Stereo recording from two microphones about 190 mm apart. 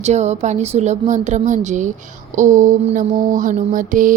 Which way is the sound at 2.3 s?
40° right (ahead or behind).